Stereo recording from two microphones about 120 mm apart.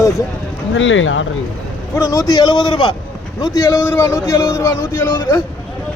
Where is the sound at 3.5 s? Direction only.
25° left (ahead or behind).